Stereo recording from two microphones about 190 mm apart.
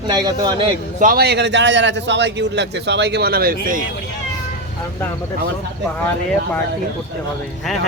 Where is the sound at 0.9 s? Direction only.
50° right (ahead or behind).